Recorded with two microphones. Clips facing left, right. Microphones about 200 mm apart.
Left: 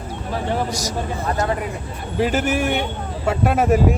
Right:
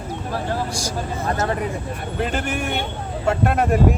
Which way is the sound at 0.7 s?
30° right (ahead or behind).